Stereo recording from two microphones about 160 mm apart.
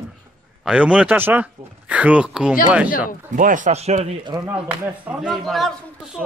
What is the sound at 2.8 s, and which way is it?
Speech, 55° left (ahead or behind).